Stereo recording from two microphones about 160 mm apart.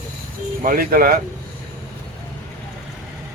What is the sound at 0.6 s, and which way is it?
Speech, 65° right (ahead or behind).